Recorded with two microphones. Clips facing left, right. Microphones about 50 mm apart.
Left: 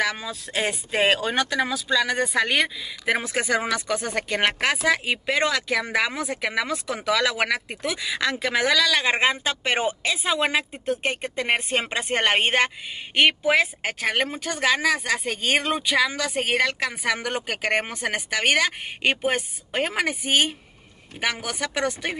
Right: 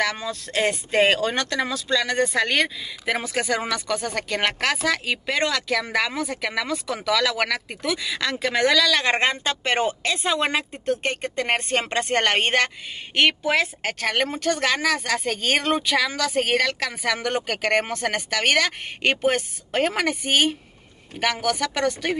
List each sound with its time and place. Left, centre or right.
0.0 s speech: centre